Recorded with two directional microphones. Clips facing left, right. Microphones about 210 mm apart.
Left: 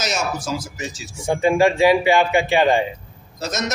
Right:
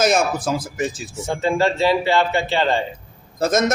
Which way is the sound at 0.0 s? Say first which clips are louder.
Right 7 dB; 55° right (ahead or behind).